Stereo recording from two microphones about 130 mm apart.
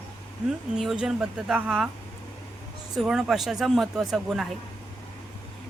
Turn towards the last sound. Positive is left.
turn(degrees=-5)  # may be behind; listen again after turning